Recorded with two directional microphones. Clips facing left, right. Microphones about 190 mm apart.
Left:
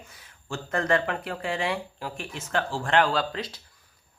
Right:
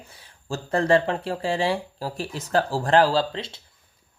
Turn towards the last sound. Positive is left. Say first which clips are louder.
# right 4 dB
turn(degrees=-25)  # may be behind; listen again after turning